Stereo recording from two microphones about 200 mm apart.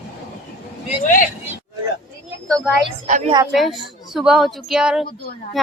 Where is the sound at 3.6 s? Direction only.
Centre (ahead or behind).